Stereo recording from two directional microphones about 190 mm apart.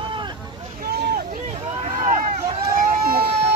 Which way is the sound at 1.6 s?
35° right (ahead or behind).